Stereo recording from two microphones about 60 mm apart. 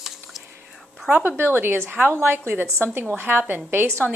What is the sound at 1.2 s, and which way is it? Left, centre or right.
A woman's voice, right.